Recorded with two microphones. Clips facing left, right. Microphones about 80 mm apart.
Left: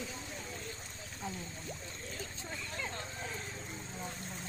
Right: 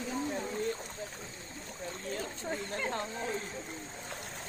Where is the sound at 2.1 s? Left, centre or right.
Right.